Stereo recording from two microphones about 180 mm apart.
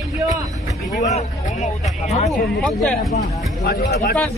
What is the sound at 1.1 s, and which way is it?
Speech, 40° left (ahead or behind).